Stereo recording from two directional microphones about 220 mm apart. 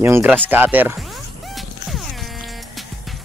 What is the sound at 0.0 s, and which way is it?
Speech, 10° right (ahead or behind).